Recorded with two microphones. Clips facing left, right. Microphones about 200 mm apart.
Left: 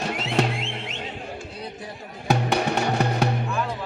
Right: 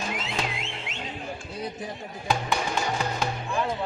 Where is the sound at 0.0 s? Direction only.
65° left (ahead or behind).